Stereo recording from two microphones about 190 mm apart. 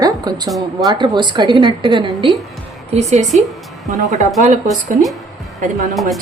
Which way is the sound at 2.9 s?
35° right (ahead or behind).